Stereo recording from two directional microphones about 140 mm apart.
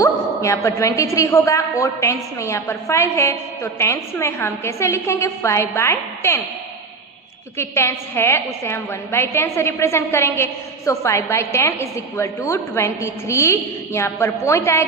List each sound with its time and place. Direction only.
0.0 s a woman's voice: 20° left (ahead or behind)
7.5 s a woman's voice: 20° left (ahead or behind)